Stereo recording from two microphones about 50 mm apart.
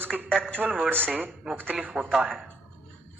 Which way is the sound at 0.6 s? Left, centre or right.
Centre.